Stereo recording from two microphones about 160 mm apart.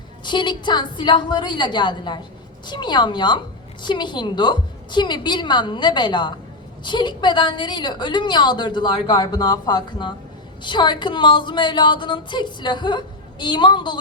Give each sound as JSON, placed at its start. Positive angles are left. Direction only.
{"t": 0.3, "sound": "a woman's voice", "side_deg": 30}